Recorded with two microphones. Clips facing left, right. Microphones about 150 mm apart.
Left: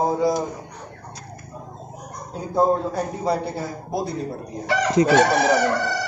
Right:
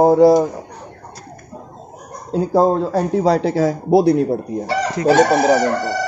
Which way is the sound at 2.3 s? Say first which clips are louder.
Right 5 dB; 90° right.